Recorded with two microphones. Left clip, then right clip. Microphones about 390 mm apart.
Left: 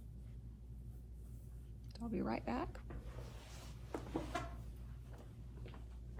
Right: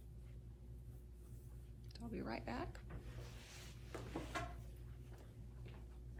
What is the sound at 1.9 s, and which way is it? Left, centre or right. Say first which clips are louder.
Speech: left 5 dB; centre.